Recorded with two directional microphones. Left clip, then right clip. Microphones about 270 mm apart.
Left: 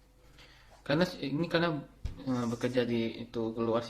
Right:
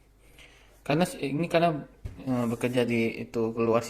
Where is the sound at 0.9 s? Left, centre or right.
Centre.